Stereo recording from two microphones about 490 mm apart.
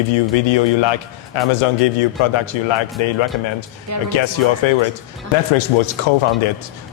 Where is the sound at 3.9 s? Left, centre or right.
Right.